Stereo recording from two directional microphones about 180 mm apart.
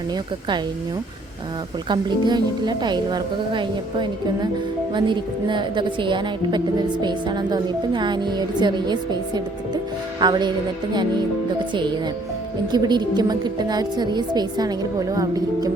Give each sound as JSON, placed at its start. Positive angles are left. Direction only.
{"t": 1.9, "sound": "a woman's voice", "side_deg": -25}
{"t": 12.7, "sound": "a woman's voice", "side_deg": -25}